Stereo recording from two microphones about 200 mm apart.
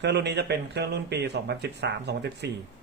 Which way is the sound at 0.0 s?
60° right (ahead or behind).